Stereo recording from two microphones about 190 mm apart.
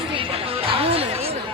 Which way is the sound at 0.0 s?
30° right (ahead or behind).